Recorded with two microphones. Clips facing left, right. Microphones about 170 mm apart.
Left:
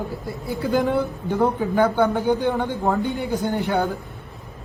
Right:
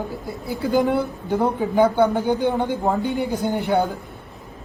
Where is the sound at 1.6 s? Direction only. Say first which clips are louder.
Right 2 dB; 15° right (ahead or behind).